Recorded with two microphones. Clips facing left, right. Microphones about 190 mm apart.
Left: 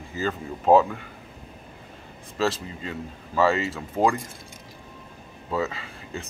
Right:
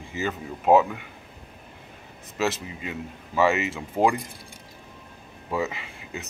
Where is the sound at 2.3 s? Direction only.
10° right (ahead or behind).